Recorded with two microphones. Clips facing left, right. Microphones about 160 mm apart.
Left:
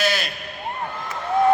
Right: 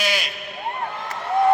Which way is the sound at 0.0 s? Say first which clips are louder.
Left 2 dB; 15° right (ahead or behind).